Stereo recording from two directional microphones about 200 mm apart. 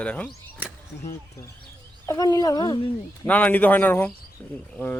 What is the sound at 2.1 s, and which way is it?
Speech, 20° left (ahead or behind).